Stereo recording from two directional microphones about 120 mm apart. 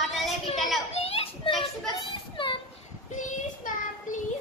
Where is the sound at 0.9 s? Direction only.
55° left (ahead or behind).